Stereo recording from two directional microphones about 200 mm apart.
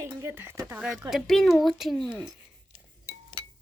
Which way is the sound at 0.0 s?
15° right (ahead or behind).